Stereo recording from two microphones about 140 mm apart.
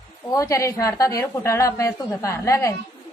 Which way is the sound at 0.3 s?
20° left (ahead or behind).